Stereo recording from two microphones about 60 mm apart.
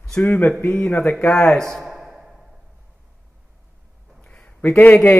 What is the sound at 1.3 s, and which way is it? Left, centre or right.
Speech, centre.